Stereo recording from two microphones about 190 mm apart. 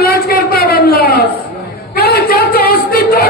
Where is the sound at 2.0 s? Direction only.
55° left (ahead or behind).